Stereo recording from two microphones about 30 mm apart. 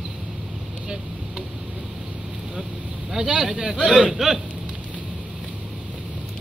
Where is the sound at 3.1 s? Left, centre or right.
Right.